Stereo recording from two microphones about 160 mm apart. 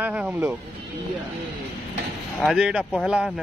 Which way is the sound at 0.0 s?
10° right (ahead or behind).